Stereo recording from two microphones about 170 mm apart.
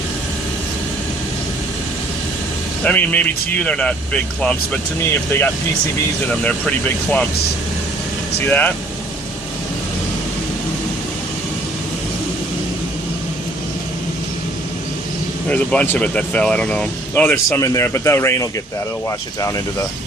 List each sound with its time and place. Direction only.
2.8 s speech: 10° left (ahead or behind)
8.4 s speech: 10° left (ahead or behind)
15.4 s speech: 10° left (ahead or behind)